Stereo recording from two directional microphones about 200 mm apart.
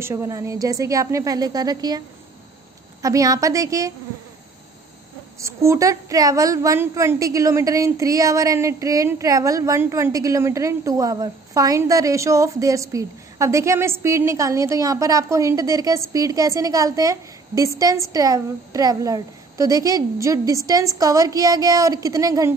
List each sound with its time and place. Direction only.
0.0 s a woman's voice: 15° right (ahead or behind)
5.4 s a woman's voice: 15° right (ahead or behind)